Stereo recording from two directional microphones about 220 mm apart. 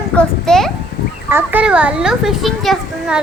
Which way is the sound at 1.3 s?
10° right (ahead or behind).